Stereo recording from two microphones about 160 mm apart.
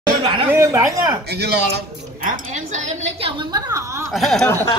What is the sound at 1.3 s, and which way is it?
Speech, 90° right.